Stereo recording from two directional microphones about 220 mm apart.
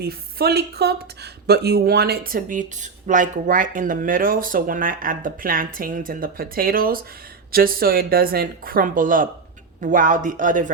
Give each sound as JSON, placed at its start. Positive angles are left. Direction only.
{"t": 0.0, "sound": "speech", "side_deg": -45}